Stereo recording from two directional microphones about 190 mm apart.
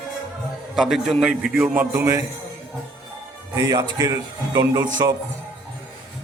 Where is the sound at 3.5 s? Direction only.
15° right (ahead or behind).